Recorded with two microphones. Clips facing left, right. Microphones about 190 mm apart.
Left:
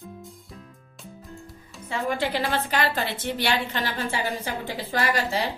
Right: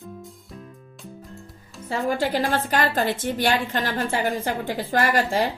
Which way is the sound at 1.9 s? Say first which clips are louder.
Right 3 dB; 40° right (ahead or behind).